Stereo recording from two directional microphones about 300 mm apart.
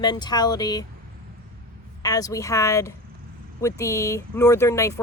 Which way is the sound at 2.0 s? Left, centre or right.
Centre.